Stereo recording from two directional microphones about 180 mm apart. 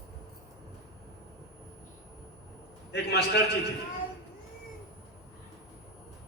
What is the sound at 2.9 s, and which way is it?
Speech, 70° left (ahead or behind).